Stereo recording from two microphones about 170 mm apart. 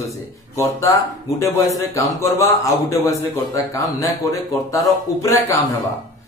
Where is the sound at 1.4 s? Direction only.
20° left (ahead or behind).